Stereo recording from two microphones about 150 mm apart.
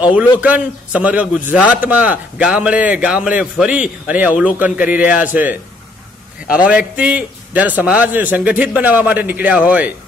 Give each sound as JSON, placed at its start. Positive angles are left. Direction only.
{"t": 0.4, "sound": "speech", "side_deg": -10}